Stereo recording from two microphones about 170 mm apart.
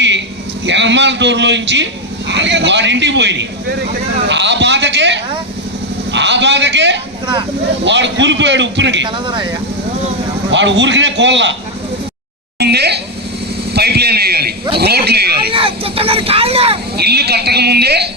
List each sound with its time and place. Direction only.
0.6 s a man's voice: 90° right
9.0 s speech: 30° right (ahead or behind)
10.5 s a man's voice: 90° right
12.5 s a woman's voice: 75° right (ahead or behind)
13.7 s a sound: 70° right (ahead or behind)
14.8 s speech: 70° right (ahead or behind)
15.5 s speech: 35° right (ahead or behind)
17.0 s speech: 70° right (ahead or behind)